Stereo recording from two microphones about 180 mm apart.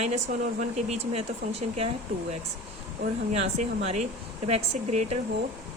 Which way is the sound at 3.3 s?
35° right (ahead or behind).